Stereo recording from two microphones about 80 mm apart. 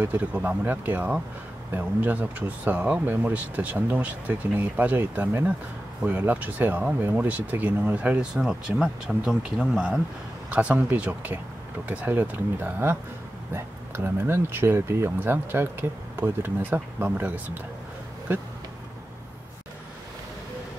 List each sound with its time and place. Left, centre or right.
0.0 s speech: centre
18.3 s speech: right